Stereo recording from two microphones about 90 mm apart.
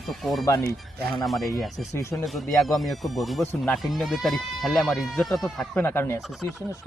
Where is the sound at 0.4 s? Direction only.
40° left (ahead or behind).